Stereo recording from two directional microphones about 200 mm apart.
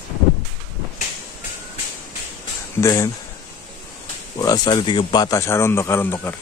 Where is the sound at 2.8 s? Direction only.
15° left (ahead or behind).